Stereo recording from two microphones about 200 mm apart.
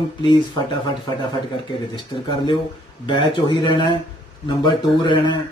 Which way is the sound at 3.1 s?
25° left (ahead or behind).